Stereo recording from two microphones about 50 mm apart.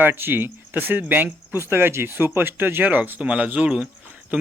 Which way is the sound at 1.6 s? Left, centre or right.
Right.